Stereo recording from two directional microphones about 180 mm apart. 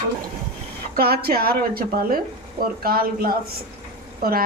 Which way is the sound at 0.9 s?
60° right (ahead or behind).